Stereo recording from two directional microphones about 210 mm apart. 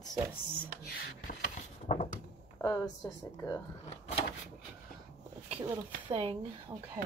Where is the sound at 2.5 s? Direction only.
15° left (ahead or behind).